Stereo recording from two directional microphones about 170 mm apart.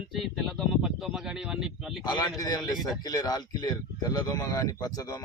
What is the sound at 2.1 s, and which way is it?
Speech, 25° left (ahead or behind).